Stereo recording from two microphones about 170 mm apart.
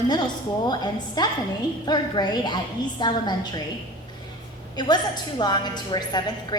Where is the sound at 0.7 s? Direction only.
25° left (ahead or behind).